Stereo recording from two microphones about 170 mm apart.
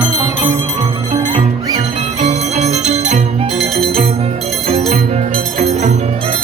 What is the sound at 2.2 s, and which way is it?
Music, 40° right (ahead or behind).